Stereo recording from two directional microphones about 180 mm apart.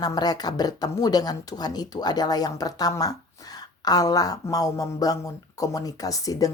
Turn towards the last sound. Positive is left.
turn(degrees=20)  # may be behind; listen again after turning